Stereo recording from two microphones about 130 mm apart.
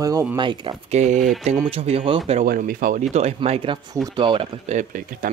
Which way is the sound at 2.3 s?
85° right.